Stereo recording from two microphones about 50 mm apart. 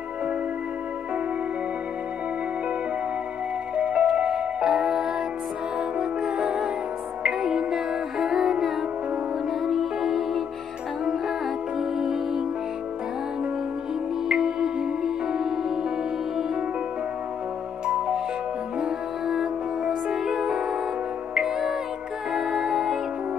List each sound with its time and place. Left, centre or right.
3.7 s music: right; by 5.1 s centre
6.2 s music: centre
12.0 s music: centre
14.3 s music: centre
17.8 s music: centre